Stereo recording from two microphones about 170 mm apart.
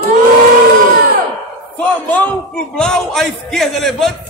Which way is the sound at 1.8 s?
10° left (ahead or behind).